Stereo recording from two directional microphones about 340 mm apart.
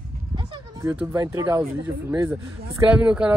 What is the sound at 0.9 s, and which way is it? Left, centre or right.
Speech, centre.